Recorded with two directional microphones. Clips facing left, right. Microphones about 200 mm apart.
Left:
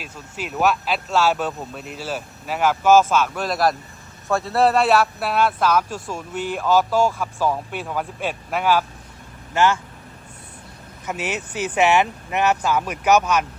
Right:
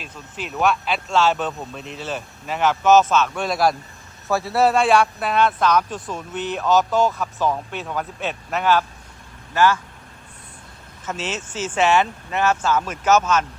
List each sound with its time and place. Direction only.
0.0 s a man's voice: 5° left (ahead or behind)
9.6 s speech: 25° left (ahead or behind)
11.0 s a man's voice: 15° left (ahead or behind)